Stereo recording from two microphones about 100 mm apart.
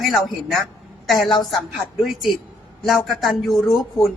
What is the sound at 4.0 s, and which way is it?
Speech, 30° left (ahead or behind).